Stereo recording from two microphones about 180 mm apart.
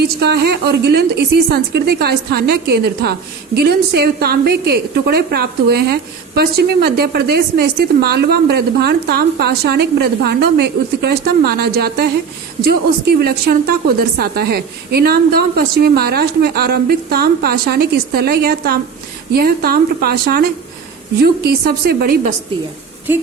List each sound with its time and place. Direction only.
0.0 s a woman's voice: 65° right (ahead or behind)